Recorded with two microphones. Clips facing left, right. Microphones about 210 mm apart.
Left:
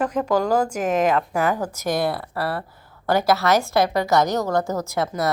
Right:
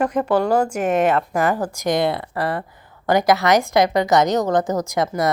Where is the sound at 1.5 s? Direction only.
10° right (ahead or behind).